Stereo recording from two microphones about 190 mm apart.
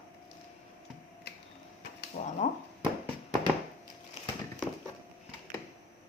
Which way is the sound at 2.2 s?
45° left (ahead or behind).